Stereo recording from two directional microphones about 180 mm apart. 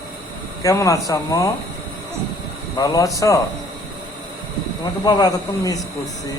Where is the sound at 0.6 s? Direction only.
15° left (ahead or behind).